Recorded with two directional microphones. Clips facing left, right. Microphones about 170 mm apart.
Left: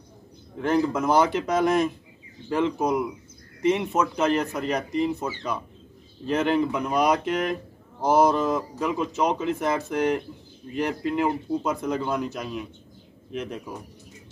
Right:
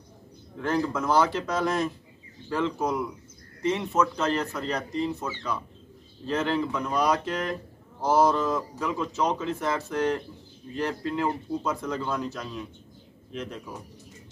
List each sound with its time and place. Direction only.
0.6 s speech: 15° left (ahead or behind)